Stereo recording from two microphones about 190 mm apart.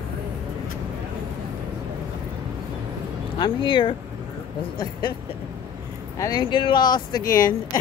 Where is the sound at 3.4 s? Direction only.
25° left (ahead or behind).